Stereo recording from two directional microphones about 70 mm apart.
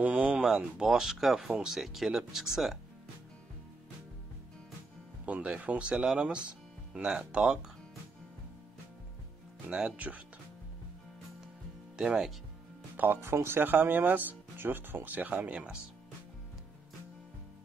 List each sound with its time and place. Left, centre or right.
0.0 s a sound: right
0.4 s speech: centre
5.2 s speech: right
9.7 s speech: centre
12.0 s speech: centre
12.9 s speech: right